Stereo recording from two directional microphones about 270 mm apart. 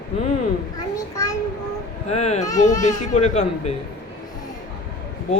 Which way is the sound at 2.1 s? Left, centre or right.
Left.